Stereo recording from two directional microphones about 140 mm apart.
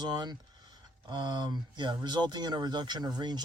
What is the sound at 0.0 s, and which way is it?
Speech, 30° right (ahead or behind).